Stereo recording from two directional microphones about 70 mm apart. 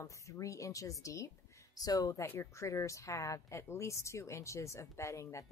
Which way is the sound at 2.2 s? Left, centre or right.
Left.